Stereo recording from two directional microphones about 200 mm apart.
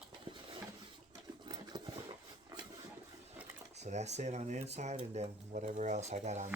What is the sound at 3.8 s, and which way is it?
Speech, 35° right (ahead or behind).